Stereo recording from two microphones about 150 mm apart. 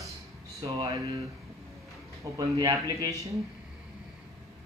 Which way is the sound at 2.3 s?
30° right (ahead or behind).